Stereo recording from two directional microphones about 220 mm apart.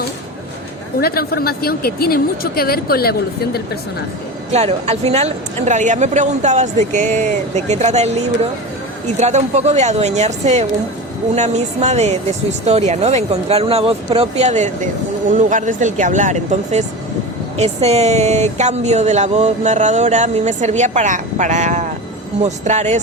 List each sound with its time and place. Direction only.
1.0 s a woman's voice: 45° left (ahead or behind)
4.5 s speech: 30° right (ahead or behind)